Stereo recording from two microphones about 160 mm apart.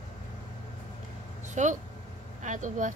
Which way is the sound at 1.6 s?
50° right (ahead or behind).